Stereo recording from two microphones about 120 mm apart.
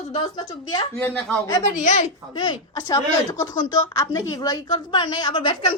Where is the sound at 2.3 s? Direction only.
35° left (ahead or behind).